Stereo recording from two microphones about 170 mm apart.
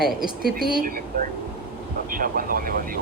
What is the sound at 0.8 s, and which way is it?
Speech, 55° right (ahead or behind).